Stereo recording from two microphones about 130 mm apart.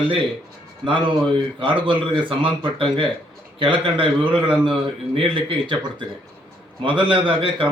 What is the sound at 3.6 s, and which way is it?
A man's voice, 40° right (ahead or behind).